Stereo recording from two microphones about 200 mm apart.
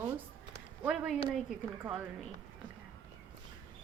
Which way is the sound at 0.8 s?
5° right (ahead or behind).